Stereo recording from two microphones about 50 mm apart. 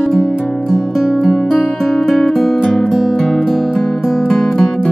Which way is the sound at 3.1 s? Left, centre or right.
Centre.